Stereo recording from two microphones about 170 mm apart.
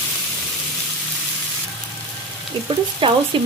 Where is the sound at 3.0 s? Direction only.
30° right (ahead or behind).